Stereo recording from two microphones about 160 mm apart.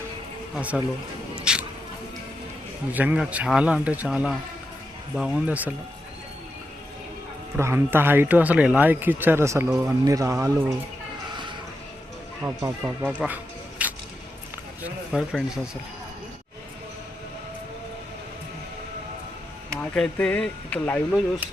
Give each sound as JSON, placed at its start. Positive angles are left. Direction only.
{"t": 0.5, "sound": "speech", "side_deg": -10}
{"t": 1.5, "sound": "rodents", "side_deg": -5}
{"t": 2.9, "sound": "speech", "side_deg": -10}
{"t": 7.5, "sound": "speech", "side_deg": -15}
{"t": 12.4, "sound": "speech", "side_deg": -15}
{"t": 19.8, "sound": "speech", "side_deg": 10}